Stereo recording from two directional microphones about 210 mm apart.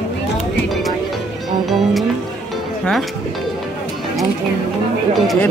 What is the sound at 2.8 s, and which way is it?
Speech, centre (ahead or behind).